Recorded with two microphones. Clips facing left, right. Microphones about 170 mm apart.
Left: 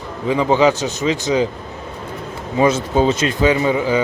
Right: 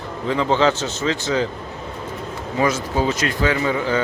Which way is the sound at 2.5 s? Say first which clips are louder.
Left 5 dB; 25° left (ahead or behind).